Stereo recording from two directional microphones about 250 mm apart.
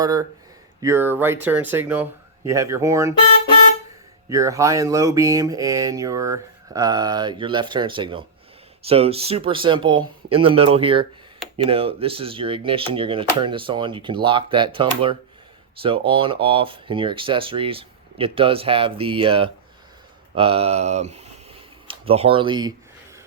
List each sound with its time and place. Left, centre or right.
0.0 s speech: centre
4.3 s speech: centre